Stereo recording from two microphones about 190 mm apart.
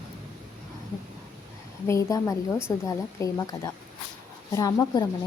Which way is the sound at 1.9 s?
15° left (ahead or behind).